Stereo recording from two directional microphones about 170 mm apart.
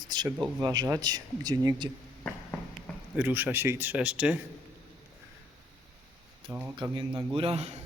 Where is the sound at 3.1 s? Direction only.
10° right (ahead or behind).